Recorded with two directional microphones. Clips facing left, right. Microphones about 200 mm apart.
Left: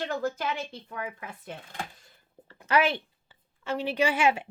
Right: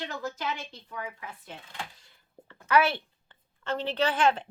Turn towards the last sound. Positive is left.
turn(degrees=10)  # may be behind; listen again after turning